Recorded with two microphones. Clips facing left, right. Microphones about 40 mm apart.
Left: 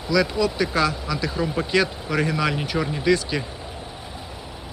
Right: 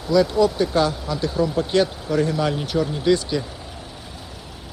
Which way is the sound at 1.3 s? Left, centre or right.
Left.